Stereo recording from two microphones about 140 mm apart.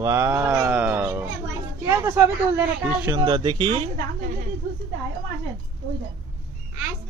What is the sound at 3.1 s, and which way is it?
Speech, 35° right (ahead or behind).